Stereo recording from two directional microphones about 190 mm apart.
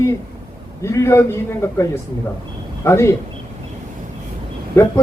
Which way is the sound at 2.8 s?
15° left (ahead or behind).